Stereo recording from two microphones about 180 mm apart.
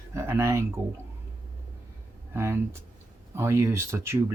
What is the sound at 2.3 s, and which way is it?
Speech, 15° right (ahead or behind).